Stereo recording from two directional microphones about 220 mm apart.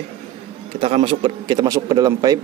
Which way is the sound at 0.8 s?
25° right (ahead or behind).